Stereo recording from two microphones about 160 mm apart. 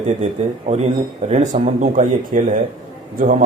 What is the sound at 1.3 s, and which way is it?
A man's voice, 45° right (ahead or behind).